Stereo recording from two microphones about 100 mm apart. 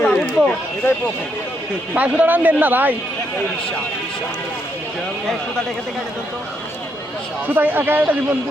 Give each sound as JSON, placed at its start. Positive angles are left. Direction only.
{"t": 0.0, "sound": "a sound", "side_deg": 15}
{"t": 2.0, "sound": "a man's voice", "side_deg": -15}
{"t": 7.4, "sound": "speech", "side_deg": -20}